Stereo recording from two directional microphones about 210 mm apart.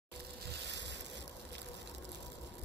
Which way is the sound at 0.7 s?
55° right (ahead or behind).